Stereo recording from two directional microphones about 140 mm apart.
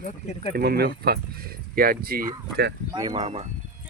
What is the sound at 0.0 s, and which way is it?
Speech, 55° left (ahead or behind).